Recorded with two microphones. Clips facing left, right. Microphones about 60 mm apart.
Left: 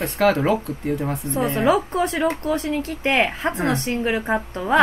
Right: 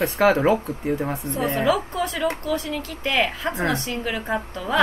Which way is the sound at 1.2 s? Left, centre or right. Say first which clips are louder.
Left 3 dB; right.